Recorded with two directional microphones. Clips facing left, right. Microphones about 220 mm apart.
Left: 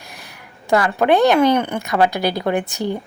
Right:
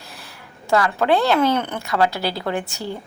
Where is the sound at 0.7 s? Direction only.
15° left (ahead or behind).